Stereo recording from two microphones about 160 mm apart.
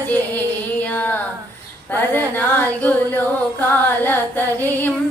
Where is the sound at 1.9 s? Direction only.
15° left (ahead or behind).